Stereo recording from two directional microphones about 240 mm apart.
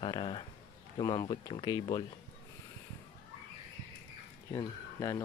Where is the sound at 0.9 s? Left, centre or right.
Centre.